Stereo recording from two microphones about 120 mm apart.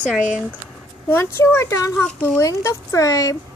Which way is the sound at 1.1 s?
20° left (ahead or behind).